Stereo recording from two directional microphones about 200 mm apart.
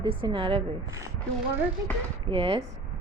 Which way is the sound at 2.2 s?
30° right (ahead or behind).